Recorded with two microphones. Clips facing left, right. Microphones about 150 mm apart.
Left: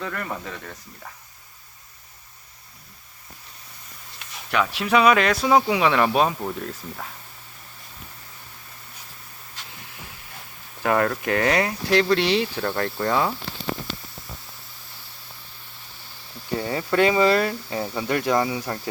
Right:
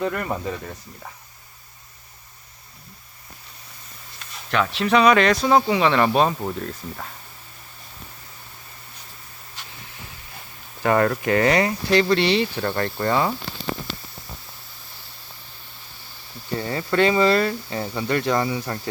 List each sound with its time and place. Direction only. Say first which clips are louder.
0.0 s speech: right 6 dB; 20° right (ahead or behind)
4.5 s speech: right 1 dB; 10° left (ahead or behind)
10.8 s speech: right 2 dB; centre (ahead or behind)
16.6 s speech: even; 5° left (ahead or behind)